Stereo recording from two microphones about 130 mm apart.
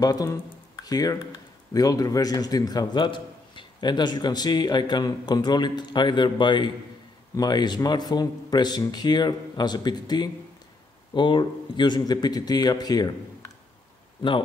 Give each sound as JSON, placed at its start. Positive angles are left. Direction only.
{"t": 0.0, "sound": "a man's voice", "side_deg": 25}